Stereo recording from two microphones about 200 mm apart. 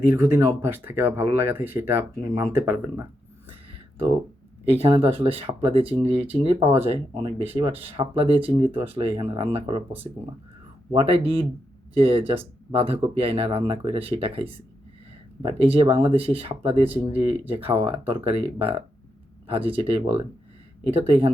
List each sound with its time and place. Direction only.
0.1 s speech: 10° right (ahead or behind)
4.7 s speech: 30° right (ahead or behind)
10.9 s speech: 30° right (ahead or behind)